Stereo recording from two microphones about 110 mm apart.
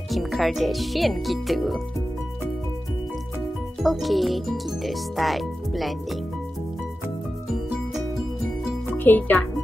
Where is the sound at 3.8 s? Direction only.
Centre (ahead or behind).